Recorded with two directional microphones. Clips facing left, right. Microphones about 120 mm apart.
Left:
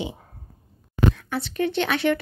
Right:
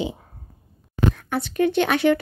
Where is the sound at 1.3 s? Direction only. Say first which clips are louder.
Right 4 dB; 45° right (ahead or behind).